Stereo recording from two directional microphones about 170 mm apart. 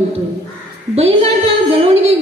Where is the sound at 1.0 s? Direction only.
35° right (ahead or behind).